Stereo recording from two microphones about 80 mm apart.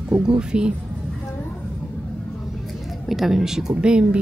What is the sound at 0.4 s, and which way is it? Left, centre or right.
Speech, centre.